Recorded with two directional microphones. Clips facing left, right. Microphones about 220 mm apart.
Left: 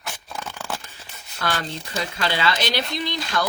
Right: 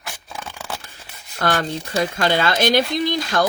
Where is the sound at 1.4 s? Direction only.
50° right (ahead or behind).